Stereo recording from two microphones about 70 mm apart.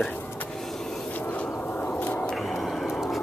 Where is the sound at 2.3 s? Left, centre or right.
Centre.